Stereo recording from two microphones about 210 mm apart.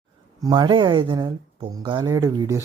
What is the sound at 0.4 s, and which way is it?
Speech, 20° right (ahead or behind).